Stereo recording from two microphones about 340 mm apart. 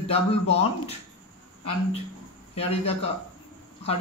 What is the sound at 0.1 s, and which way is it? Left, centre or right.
Speech, centre.